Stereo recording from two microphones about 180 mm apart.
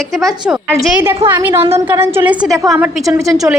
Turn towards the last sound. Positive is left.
turn(degrees=-10)  # may be behind; listen again after turning